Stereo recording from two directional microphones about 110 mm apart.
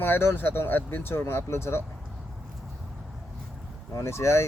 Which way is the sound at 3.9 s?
25° left (ahead or behind).